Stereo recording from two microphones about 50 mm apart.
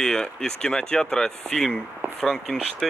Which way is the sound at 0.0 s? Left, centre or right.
Centre.